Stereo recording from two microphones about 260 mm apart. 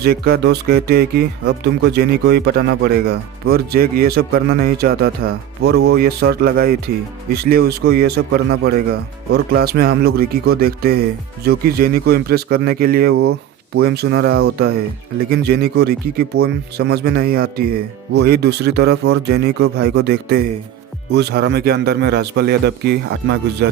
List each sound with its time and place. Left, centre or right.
0.0 s speech: right
15.3 s speech: right